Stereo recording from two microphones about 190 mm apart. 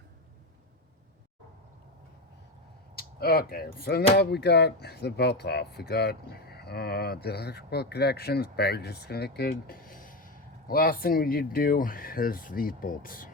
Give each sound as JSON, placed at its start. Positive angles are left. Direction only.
{"t": 2.9, "sound": "speech", "side_deg": 55}